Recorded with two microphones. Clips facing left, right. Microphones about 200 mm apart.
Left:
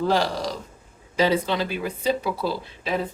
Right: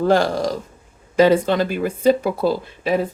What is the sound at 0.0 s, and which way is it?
Speech, 50° right (ahead or behind).